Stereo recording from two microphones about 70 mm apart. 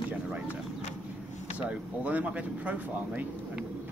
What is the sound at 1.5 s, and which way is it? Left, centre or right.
Speech, right.